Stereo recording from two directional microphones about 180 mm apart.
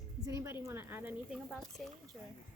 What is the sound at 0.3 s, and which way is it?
A woman's voice, 15° right (ahead or behind).